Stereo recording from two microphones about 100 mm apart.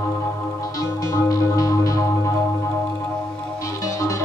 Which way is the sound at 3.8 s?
30° left (ahead or behind).